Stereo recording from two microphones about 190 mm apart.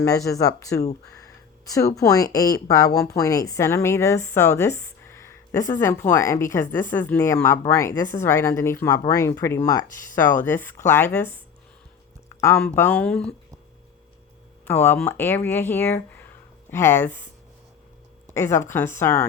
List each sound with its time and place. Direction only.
0.0 s a woman's voice: 15° left (ahead or behind)
1.1 s a sound: 20° left (ahead or behind)
2.0 s a woman's voice: 20° left (ahead or behind)
12.5 s speech: 10° left (ahead or behind)
14.6 s a woman's voice: 10° left (ahead or behind)
18.3 s a woman's voice: 15° left (ahead or behind)